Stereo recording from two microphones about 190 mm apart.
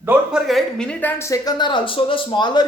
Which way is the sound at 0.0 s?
5° right (ahead or behind).